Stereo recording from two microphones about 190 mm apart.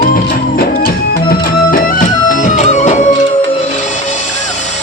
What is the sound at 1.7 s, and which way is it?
Music, 40° left (ahead or behind).